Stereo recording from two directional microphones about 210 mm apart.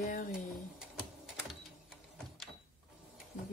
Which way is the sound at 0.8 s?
5° right (ahead or behind).